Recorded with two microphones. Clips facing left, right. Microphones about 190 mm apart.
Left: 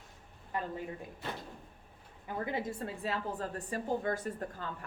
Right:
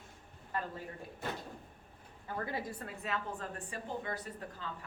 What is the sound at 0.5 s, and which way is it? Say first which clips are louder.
Speech: left 2 dB; 15° left (ahead or behind).